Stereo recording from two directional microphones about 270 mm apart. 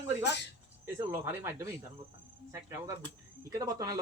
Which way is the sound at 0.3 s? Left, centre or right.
Left.